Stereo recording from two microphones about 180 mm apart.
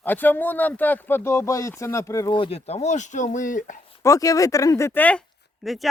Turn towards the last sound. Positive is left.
turn(degrees=0)  # may be behind; listen again after turning